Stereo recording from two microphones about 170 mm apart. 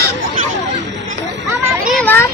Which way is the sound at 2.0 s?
10° left (ahead or behind).